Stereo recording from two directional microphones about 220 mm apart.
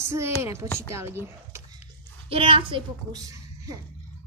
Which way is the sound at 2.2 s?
25° right (ahead or behind).